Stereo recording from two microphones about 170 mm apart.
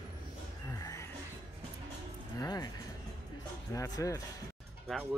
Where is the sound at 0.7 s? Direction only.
20° left (ahead or behind).